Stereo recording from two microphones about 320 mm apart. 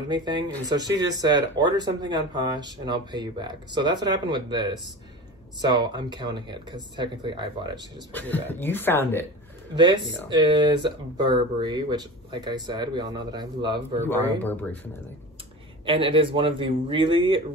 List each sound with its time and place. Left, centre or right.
0.1 s speech: centre
8.1 s speech: centre
9.8 s speech: centre
14.0 s speech: centre
15.8 s speech: centre